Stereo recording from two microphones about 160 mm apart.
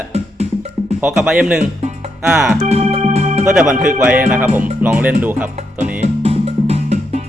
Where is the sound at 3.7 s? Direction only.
55° right (ahead or behind).